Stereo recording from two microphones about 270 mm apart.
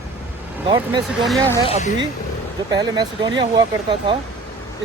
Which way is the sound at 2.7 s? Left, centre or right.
Centre.